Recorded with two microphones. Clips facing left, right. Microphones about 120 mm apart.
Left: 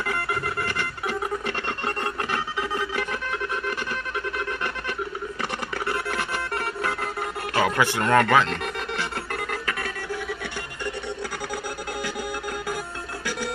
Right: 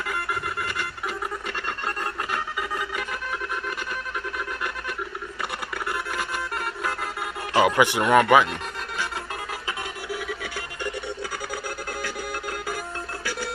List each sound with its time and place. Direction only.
0.0 s music: 5° right (ahead or behind)
7.5 s speech: 15° right (ahead or behind)